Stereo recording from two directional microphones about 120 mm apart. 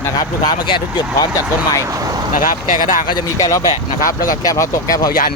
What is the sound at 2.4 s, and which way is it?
Speech, 90° left.